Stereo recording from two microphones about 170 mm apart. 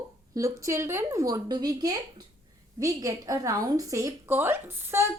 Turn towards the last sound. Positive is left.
turn(degrees=-15)  # may be behind; listen again after turning